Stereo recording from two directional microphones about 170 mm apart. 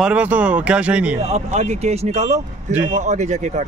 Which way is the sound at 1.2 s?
40° right (ahead or behind).